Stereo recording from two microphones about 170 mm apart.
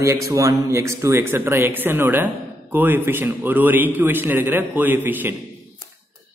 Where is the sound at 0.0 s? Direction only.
20° right (ahead or behind).